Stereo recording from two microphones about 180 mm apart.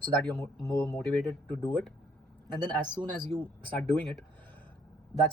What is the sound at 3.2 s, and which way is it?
Speech, 10° left (ahead or behind).